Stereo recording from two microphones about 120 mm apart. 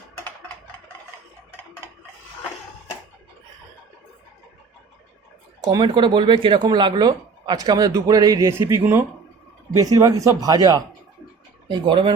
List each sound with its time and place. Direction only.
5.6 s speech: 40° right (ahead or behind)